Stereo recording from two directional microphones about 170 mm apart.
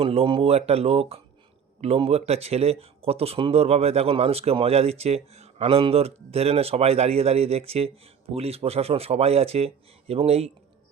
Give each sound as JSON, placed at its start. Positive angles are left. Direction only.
{"t": 0.0, "sound": "speech", "side_deg": -35}